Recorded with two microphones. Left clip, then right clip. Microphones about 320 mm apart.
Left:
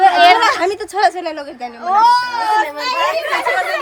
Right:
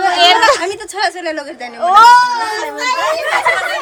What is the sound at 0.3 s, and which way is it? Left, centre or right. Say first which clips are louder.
A woman's voice: right 2 dB; centre.